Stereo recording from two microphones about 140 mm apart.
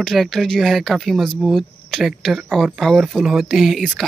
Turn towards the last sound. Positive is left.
turn(degrees=0)  # may be behind; listen again after turning